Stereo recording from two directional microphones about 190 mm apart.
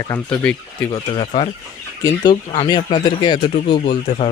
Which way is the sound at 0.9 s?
25° left (ahead or behind).